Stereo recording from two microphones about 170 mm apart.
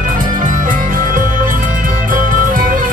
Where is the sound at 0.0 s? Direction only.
50° right (ahead or behind).